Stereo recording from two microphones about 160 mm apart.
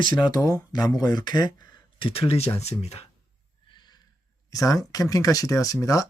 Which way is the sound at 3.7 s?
25° left (ahead or behind).